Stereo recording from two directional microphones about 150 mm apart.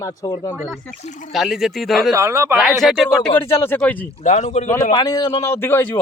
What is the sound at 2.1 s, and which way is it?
Speech, 20° right (ahead or behind).